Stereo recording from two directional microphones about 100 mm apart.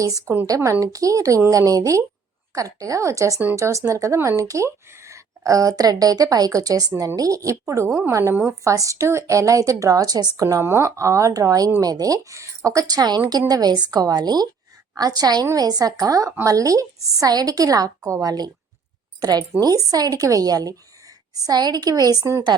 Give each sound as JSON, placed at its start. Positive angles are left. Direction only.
{"t": 0.0, "sound": "speech", "side_deg": -35}